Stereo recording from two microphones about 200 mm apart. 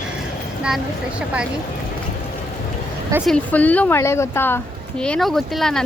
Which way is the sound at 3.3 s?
10° left (ahead or behind).